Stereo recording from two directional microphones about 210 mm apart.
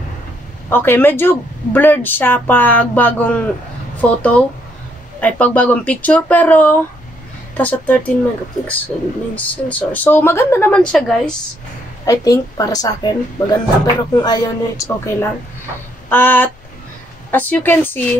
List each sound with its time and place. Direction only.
0.7 s speech: 10° left (ahead or behind)
12.1 s a woman's voice: 15° left (ahead or behind)